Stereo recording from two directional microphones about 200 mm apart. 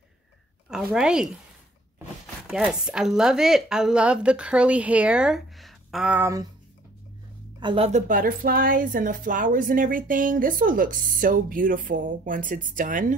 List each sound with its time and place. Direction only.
0.7 s speech: 5° right (ahead or behind)
2.4 s speech: 5° right (ahead or behind)
7.6 s a woman's voice: 30° right (ahead or behind)
8.1 s a woman's voice: 45° right (ahead or behind)